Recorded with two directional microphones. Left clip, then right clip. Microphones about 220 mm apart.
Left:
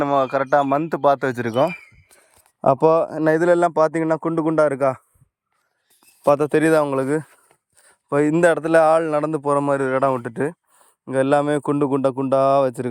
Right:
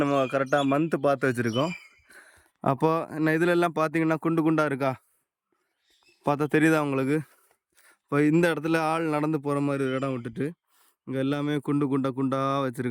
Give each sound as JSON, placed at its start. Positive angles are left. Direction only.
{"t": 0.0, "sound": "speech", "side_deg": -5}
{"t": 2.6, "sound": "speech", "side_deg": 0}
{"t": 3.3, "sound": "a man's voice", "side_deg": -15}
{"t": 6.2, "sound": "a man's voice", "side_deg": -5}